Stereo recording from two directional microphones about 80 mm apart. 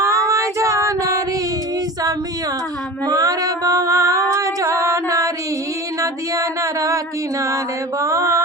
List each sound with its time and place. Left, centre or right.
0.0 s female singing: right
3.1 s singing: right
6.0 s music: right